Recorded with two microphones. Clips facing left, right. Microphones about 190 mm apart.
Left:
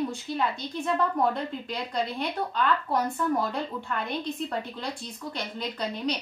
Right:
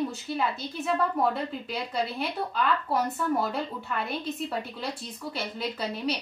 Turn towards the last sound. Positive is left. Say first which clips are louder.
# even
turn(degrees=-5)  # may be behind; listen again after turning